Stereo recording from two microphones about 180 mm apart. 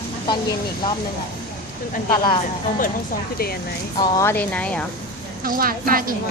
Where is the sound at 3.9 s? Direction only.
20° left (ahead or behind); by 4.9 s 5° left (ahead or behind).